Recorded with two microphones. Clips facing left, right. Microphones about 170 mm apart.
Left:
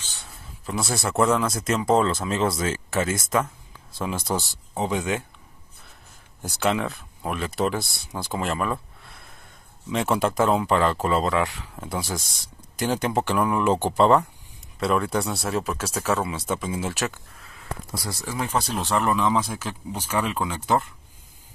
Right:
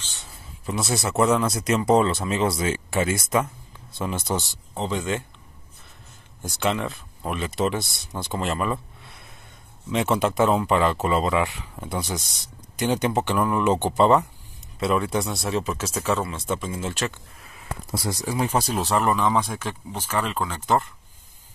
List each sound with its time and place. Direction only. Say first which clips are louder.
0.7 s speech: right 1 dB; centre (ahead or behind)
6.4 s speech: left 1 dB; centre (ahead or behind)
17.6 s a sound: right 2 dB; 20° right (ahead or behind)
18.5 s speech: left 1 dB; 10° right (ahead or behind); by 20.9 s 5° left (ahead or behind)